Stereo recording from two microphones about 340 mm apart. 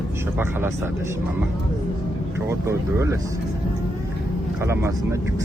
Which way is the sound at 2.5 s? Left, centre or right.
Centre.